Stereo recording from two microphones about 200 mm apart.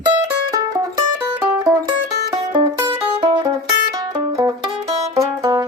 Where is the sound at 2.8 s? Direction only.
25° right (ahead or behind).